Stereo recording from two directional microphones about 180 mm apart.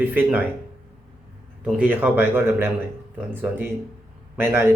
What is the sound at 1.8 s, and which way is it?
Speech, 10° right (ahead or behind).